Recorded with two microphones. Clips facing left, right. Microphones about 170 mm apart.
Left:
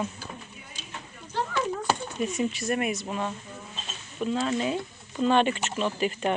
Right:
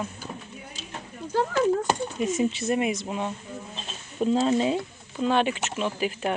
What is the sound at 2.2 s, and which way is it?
Speech, 20° right (ahead or behind).